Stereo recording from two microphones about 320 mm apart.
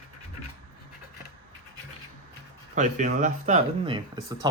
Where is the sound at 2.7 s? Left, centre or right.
Right.